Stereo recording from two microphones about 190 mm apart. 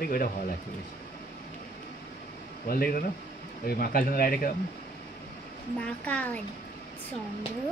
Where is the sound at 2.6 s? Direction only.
50° left (ahead or behind).